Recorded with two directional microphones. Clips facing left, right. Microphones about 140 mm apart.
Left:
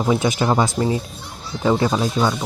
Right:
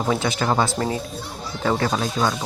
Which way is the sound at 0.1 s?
20° left (ahead or behind).